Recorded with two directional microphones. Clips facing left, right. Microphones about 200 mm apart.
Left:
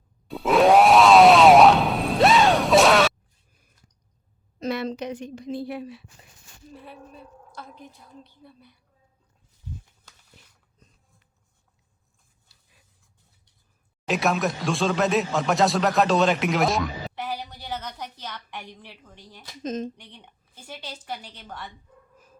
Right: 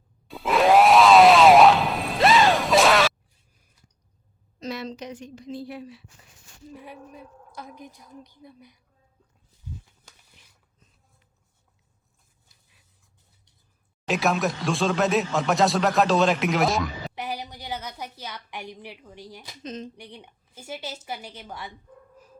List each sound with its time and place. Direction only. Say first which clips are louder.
0.3 s grunt: left 2 dB; centre (ahead or behind)
4.6 s a woman's voice: left 5 dB; 60° left (ahead or behind)
6.7 s a woman's voice: right 1 dB; 15° right (ahead or behind)
14.1 s speech: even; centre (ahead or behind)
17.2 s a woman's voice: even; 15° right (ahead or behind)
19.6 s speech: left 6 dB; 45° left (ahead or behind)
20.0 s a woman's voice: right 6 dB; 10° right (ahead or behind)